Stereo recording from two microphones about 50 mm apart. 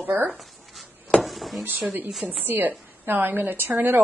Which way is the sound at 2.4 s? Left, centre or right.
Right.